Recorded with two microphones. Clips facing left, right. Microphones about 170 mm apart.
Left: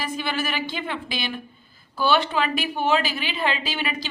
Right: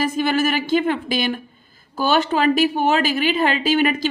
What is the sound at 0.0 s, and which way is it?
A woman's voice, 45° right (ahead or behind).